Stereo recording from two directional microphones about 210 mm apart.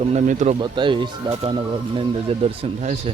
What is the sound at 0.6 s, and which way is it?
Speech, 20° right (ahead or behind).